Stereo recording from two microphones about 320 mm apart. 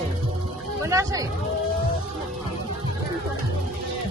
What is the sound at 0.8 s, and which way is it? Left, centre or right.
Speech, centre.